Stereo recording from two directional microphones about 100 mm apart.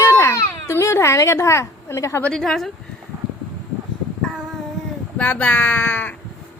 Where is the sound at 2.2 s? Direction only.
5° left (ahead or behind).